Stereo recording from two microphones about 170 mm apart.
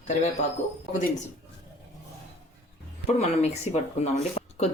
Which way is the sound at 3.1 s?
40° left (ahead or behind).